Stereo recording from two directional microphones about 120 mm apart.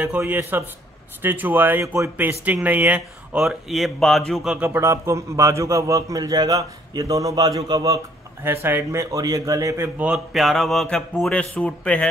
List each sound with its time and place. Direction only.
0.0 s speech: 15° right (ahead or behind); by 4.6 s centre (ahead or behind)
4.6 s a man's voice: 20° right (ahead or behind)
8.5 s speech: 20° right (ahead or behind)
9.1 s a man's voice: 30° right (ahead or behind)
9.9 s a man's voice: 5° right (ahead or behind)